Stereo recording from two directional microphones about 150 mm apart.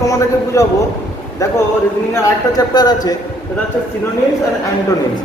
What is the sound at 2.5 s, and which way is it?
Speech, 25° left (ahead or behind).